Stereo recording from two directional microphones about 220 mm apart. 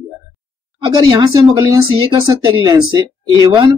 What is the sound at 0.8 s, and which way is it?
Speech, 20° right (ahead or behind).